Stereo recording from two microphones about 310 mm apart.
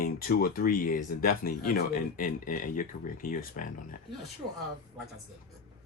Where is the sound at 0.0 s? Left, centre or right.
Left.